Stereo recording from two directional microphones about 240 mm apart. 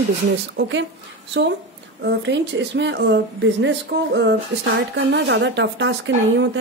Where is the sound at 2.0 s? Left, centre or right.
Right.